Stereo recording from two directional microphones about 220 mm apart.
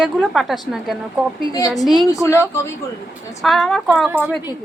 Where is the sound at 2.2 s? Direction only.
10° left (ahead or behind).